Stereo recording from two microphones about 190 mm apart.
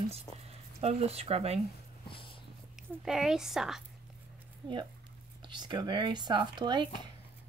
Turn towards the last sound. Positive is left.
turn(degrees=-25)  # may be behind; listen again after turning